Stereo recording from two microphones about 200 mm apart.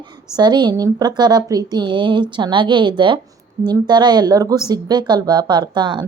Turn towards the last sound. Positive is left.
turn(degrees=-20)  # may be behind; listen again after turning